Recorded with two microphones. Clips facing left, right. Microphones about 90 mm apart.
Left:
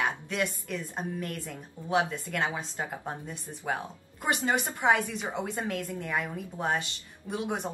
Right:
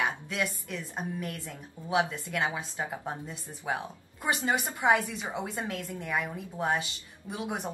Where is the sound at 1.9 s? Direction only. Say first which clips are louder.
Left 1 dB; 10° right (ahead or behind).